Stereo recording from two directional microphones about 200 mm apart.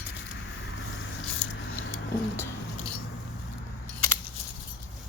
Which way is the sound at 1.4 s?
5° left (ahead or behind).